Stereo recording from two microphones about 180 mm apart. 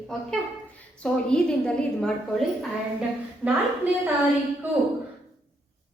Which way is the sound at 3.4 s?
5° right (ahead or behind).